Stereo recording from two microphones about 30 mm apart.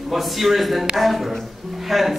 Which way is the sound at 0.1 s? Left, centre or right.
Centre.